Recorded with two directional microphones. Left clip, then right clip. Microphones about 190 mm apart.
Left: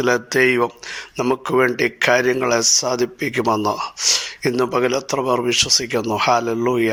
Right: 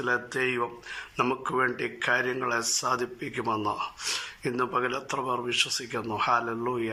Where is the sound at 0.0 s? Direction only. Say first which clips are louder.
Left 11 dB; 30° left (ahead or behind).